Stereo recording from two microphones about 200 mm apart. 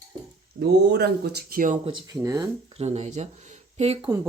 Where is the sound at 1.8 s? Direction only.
25° right (ahead or behind).